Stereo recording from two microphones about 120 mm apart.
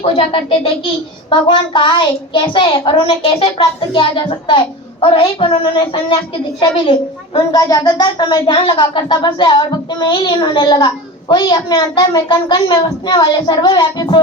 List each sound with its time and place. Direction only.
0.0 s a child's voice: 55° left (ahead or behind)
7.3 s speech: 30° left (ahead or behind)